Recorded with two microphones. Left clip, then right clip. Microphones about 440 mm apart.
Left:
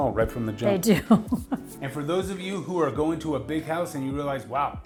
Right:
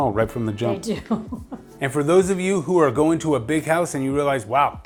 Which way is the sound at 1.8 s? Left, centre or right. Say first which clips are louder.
Right 11 dB; right.